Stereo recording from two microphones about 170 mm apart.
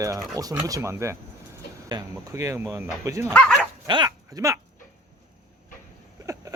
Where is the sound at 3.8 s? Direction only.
25° right (ahead or behind).